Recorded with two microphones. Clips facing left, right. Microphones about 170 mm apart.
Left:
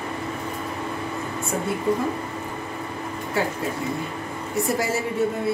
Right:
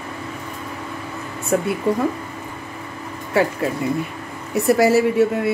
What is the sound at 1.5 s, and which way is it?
Speech, 70° right (ahead or behind).